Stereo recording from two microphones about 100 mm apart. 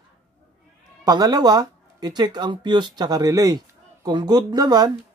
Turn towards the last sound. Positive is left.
turn(degrees=-40)  # may be behind; listen again after turning